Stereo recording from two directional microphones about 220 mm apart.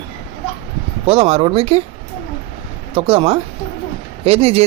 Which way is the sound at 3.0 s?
25° right (ahead or behind).